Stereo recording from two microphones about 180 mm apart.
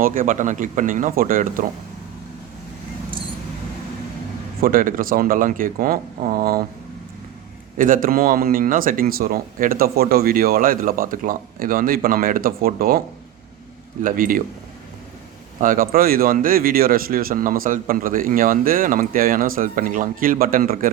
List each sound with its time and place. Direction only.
0.0 s speech: 50° right (ahead or behind)
4.6 s speech: 50° right (ahead or behind)
7.8 s speech: 50° right (ahead or behind)
14.0 s speech: 50° right (ahead or behind)
15.6 s speech: 50° right (ahead or behind)